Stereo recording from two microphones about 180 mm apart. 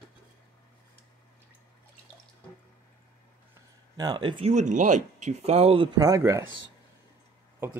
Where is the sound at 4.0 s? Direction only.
25° right (ahead or behind).